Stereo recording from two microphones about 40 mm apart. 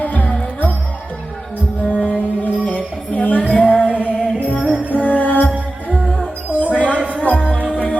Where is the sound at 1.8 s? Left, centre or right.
Left.